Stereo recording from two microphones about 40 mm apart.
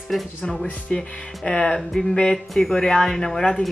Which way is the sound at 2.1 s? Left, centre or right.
Left.